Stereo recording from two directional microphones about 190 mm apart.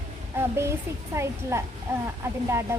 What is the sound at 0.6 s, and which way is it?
Speech, 15° right (ahead or behind).